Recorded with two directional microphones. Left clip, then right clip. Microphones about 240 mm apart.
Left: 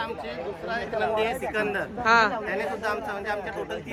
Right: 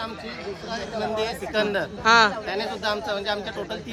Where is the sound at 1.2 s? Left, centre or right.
Centre.